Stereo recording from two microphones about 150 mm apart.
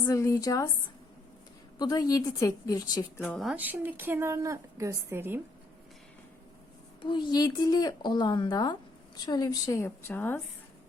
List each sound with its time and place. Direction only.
0.0 s a woman's voice: 20° left (ahead or behind)
1.8 s a woman's voice: 25° left (ahead or behind)
3.2 s speech: 5° left (ahead or behind)
3.5 s a woman's voice: 10° right (ahead or behind)
7.0 s a woman's voice: 30° left (ahead or behind); by 10.4 s 15° left (ahead or behind)